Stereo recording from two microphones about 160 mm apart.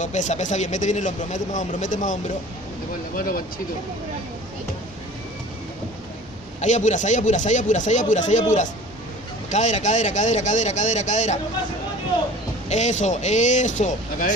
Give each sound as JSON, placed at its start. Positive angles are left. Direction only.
{"t": 0.0, "sound": "speech", "side_deg": 50}
{"t": 3.2, "sound": "speech", "side_deg": 65}
{"t": 6.6, "sound": "speech", "side_deg": 50}
{"t": 12.6, "sound": "speech", "side_deg": 45}